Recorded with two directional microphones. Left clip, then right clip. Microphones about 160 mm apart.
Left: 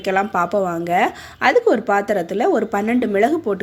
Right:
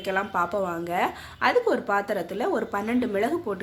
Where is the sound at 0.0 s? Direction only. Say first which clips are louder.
Left 7 dB; 30° left (ahead or behind).